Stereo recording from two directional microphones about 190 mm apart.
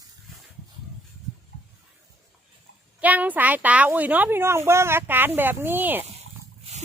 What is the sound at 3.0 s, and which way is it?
Speech, 10° right (ahead or behind).